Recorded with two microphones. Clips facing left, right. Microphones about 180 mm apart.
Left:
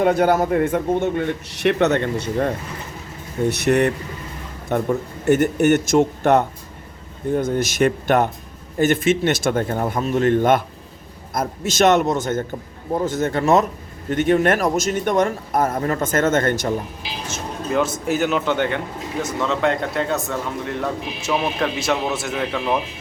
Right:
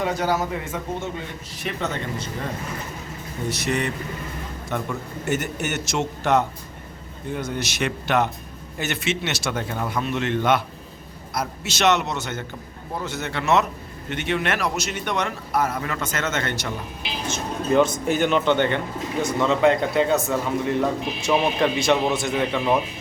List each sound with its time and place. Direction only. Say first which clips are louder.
0.0 s a man's voice: left 7 dB; 55° left (ahead or behind)
3.7 s a man's voice: left 8 dB; 60° left (ahead or behind)
17.2 s speech: right 3 dB; 5° left (ahead or behind)